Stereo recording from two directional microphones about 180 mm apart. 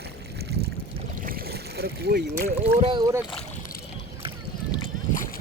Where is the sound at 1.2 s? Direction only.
55° right (ahead or behind).